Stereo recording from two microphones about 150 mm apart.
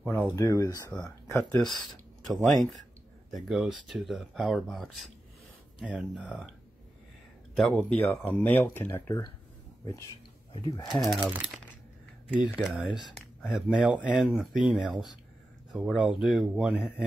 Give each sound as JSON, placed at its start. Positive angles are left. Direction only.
{"t": 0.0, "sound": "speech", "side_deg": 10}
{"t": 0.4, "sound": "speech", "side_deg": 25}
{"t": 1.6, "sound": "speech", "side_deg": 0}
{"t": 7.5, "sound": "speech", "side_deg": 5}
{"t": 10.5, "sound": "speech", "side_deg": 35}
{"t": 10.9, "sound": "speech", "side_deg": 0}
{"t": 12.4, "sound": "speech", "side_deg": -5}